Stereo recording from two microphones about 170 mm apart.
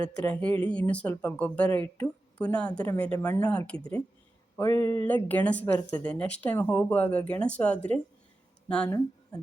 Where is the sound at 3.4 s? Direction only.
5° left (ahead or behind).